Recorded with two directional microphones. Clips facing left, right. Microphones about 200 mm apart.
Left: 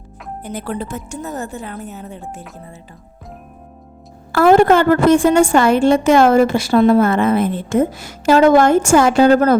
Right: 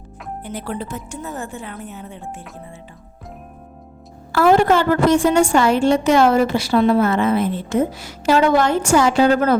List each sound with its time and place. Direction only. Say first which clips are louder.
0.4 s a woman's voice: left 3 dB; 45° left (ahead or behind)
4.3 s a woman's voice: left 3 dB; 50° left (ahead or behind)